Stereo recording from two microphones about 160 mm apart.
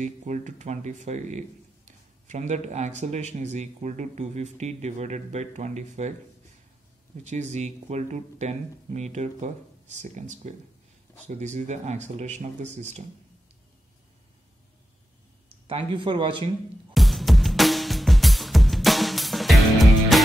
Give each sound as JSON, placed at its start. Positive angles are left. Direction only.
{"t": 0.0, "sound": "speech", "side_deg": -50}
{"t": 7.2, "sound": "speech", "side_deg": -45}
{"t": 15.4, "sound": "speech", "side_deg": -35}
{"t": 16.9, "sound": "music", "side_deg": 0}